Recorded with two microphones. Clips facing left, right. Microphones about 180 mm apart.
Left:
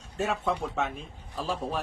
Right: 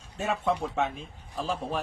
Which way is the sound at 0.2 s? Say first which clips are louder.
Right 1 dB; centre (ahead or behind).